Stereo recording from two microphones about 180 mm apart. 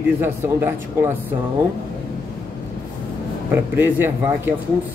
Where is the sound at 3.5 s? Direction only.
10° right (ahead or behind).